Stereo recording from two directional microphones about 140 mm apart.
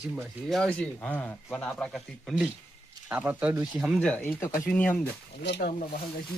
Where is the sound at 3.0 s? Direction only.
10° right (ahead or behind).